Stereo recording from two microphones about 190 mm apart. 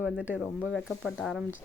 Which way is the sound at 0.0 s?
5° right (ahead or behind).